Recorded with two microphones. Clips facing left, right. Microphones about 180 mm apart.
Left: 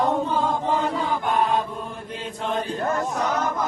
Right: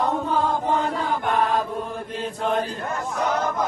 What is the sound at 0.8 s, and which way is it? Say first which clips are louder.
Chant: even; centre (ahead or behind).